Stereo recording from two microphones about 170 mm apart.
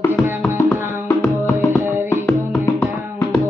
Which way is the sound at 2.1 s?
15° left (ahead or behind).